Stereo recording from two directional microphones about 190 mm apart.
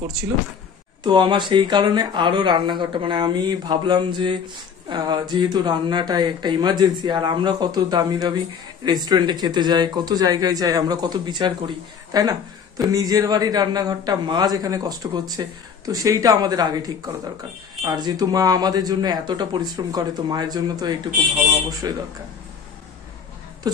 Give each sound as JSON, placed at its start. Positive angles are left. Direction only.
{"t": 1.0, "sound": "speech", "side_deg": -25}